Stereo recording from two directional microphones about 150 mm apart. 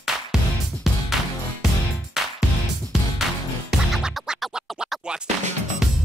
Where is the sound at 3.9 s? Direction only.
Centre (ahead or behind).